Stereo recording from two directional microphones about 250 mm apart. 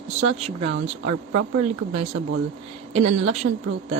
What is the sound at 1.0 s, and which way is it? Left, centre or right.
Speech, right.